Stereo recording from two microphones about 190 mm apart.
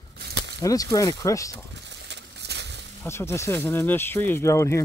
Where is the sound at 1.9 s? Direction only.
65° right (ahead or behind).